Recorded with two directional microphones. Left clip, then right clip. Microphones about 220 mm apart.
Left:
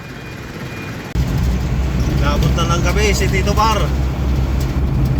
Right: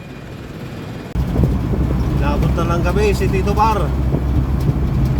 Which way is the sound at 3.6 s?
15° right (ahead or behind).